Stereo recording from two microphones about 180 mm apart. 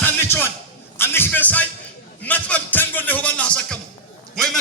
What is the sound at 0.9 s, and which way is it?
A man's voice, 10° left (ahead or behind).